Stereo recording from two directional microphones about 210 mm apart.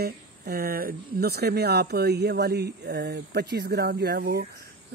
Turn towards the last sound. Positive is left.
turn(degrees=-50)  # may be behind; listen again after turning